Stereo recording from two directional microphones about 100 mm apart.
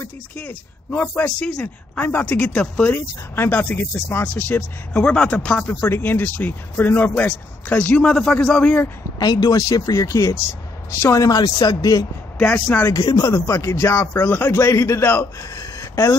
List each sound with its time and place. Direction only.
0.4 s speech: 15° left (ahead or behind)
5.7 s speech: 20° left (ahead or behind)
9.2 s a man's voice: 40° left (ahead or behind)
11.2 s speech: 40° left (ahead or behind)
12.4 s speech: 10° left (ahead or behind)
12.9 s a man's voice: 40° left (ahead or behind); by 15.2 s 25° left (ahead or behind)
15.5 s a sound: 35° left (ahead or behind)